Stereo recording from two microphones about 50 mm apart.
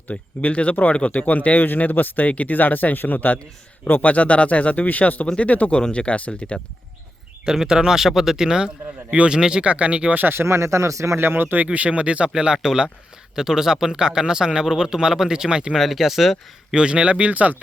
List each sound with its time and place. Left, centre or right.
0.1 s speech: left
4.1 s speech: left
5.7 s speech: centre
7.4 s a man's voice: centre
10.2 s speech: right
10.4 s speech: right
11.2 s a man's voice: right; by 15.7 s centre
15.7 s speech: centre
16.7 s speech: centre